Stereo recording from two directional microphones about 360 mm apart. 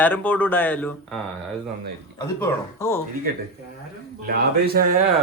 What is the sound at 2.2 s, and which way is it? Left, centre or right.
Speech, centre.